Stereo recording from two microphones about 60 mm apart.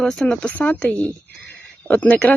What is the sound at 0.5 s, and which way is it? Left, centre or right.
Speech, left.